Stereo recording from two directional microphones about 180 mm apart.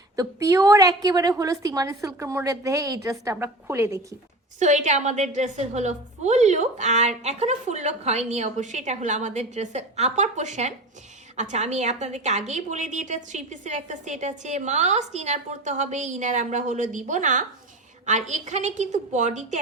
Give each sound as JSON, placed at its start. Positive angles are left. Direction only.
{"t": 0.2, "sound": "a woman's voice", "side_deg": -20}
{"t": 4.6, "sound": "a woman's voice", "side_deg": -40}